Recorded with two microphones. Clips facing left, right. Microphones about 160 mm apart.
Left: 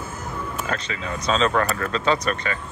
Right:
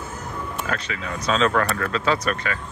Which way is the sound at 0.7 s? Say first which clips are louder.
Right 1 dB; 30° left (ahead or behind).